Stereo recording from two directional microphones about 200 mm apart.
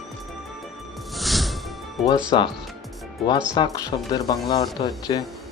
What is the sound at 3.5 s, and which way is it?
Speech, 20° left (ahead or behind).